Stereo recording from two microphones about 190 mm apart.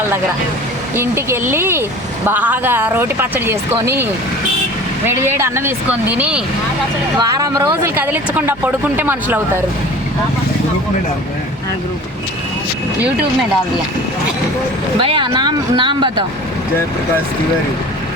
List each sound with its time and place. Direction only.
0.9 s speech: 10° right (ahead or behind)
5.0 s speech: 10° right (ahead or behind)
7.2 s speech: 20° right (ahead or behind)
15.0 s speech: 25° right (ahead or behind)